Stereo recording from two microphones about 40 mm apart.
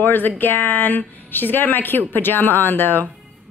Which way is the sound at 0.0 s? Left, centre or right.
Left.